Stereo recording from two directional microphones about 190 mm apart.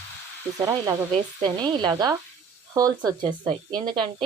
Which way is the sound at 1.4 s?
20° right (ahead or behind).